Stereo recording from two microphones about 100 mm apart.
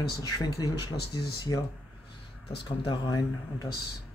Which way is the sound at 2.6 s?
50° left (ahead or behind).